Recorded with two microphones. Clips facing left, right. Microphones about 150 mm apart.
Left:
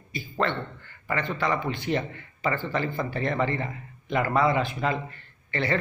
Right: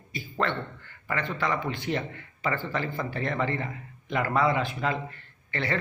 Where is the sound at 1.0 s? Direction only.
10° left (ahead or behind).